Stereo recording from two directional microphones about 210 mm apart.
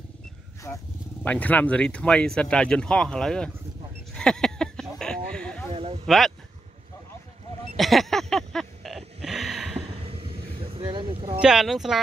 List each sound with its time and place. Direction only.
0.7 s speech: 5° left (ahead or behind)
4.1 s a sound: 5° left (ahead or behind)
5.7 s speech: 25° right (ahead or behind)
6.0 s speech: centre (ahead or behind)
7.7 s a sound: centre (ahead or behind)
9.8 s vehicle: 25° right (ahead or behind)
11.4 s speech: centre (ahead or behind)